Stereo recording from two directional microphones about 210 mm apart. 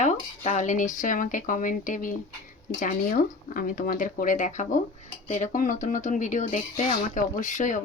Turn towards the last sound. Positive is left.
turn(degrees=35)  # may be behind; listen again after turning